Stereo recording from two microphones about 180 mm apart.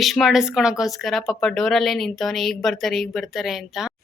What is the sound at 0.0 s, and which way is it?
Speech, centre (ahead or behind).